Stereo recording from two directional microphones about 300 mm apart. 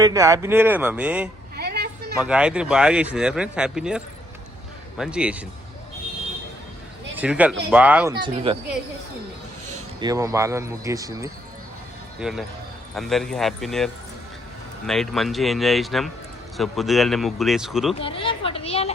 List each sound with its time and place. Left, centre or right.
0.0 s speech: centre
1.5 s a sound: right
2.2 s speech: centre
7.2 s speech: centre
8.2 s speech: centre
10.0 s speech: centre
18.0 s speech: centre